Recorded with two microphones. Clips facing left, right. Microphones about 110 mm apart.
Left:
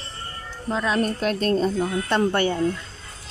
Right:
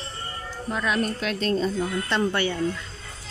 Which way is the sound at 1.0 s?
45° left (ahead or behind).